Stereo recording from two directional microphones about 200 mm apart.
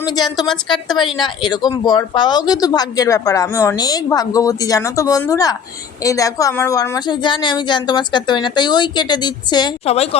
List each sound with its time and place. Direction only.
0.1 s speech: 20° left (ahead or behind)
0.5 s a woman's voice: centre (ahead or behind)
1.1 s speech: 20° left (ahead or behind)